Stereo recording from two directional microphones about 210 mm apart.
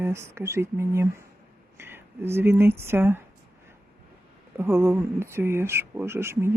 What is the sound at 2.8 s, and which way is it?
Speech, 10° right (ahead or behind).